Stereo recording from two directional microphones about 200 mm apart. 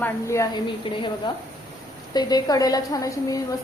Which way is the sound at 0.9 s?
25° left (ahead or behind).